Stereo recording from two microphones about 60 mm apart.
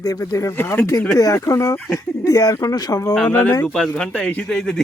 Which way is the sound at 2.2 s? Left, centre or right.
Left.